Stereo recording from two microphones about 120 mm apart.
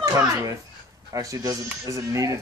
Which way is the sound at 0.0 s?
30° right (ahead or behind).